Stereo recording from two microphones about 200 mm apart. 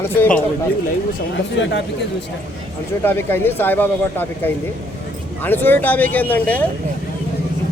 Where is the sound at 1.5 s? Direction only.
65° left (ahead or behind).